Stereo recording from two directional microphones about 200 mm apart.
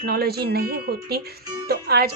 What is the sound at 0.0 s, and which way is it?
A woman's voice, 50° right (ahead or behind).